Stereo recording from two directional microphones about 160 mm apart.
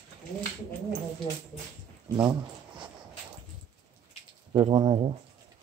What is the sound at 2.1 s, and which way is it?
Speech, 20° right (ahead or behind).